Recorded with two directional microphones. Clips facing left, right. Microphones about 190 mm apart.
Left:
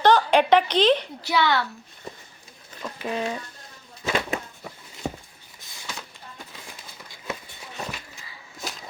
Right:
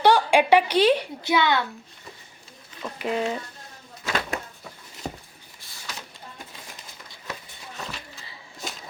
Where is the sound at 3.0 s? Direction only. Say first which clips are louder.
Right 2 dB; 20° right (ahead or behind).